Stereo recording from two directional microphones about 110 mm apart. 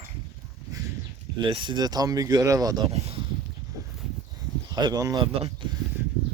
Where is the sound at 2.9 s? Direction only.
75° right (ahead or behind).